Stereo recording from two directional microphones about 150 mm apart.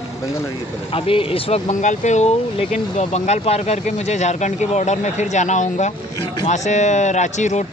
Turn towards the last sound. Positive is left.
turn(degrees=50)  # may be behind; listen again after turning